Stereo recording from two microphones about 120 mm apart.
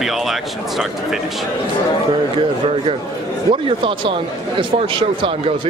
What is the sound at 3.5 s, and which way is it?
Speech, 45° right (ahead or behind).